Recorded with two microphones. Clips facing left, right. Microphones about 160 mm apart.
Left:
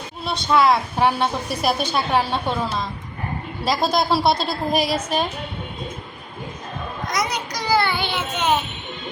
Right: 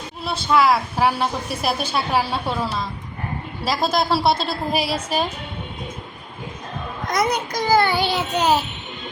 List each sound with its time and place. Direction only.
0.3 s a woman's voice: centre (ahead or behind)
7.1 s a child's voice: 55° right (ahead or behind); by 8.6 s 35° right (ahead or behind)